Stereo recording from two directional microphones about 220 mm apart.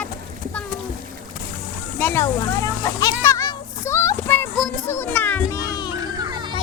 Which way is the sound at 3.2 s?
15° left (ahead or behind).